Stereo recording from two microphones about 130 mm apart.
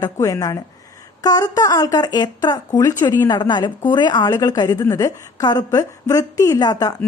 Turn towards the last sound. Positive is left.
turn(degrees=30)  # may be behind; listen again after turning